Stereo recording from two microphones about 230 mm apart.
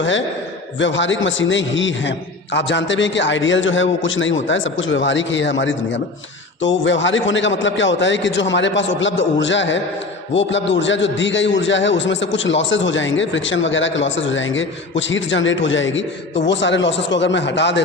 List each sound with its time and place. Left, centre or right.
0.8 s a man's voice: left